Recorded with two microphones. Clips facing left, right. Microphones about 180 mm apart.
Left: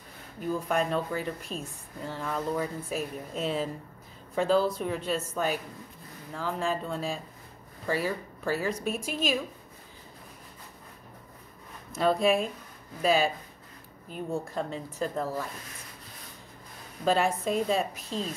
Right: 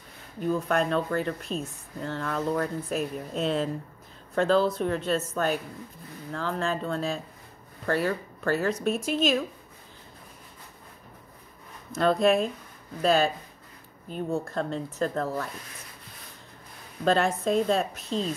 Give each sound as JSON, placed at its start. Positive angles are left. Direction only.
{"t": 0.5, "sound": "speech", "side_deg": 5}
{"t": 11.9, "sound": "speech", "side_deg": 10}
{"t": 17.0, "sound": "speech", "side_deg": 10}